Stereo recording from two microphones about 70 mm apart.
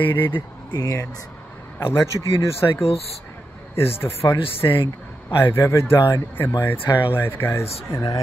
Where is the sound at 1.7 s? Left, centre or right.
Left.